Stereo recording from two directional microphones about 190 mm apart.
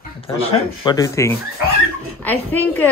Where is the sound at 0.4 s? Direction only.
30° left (ahead or behind).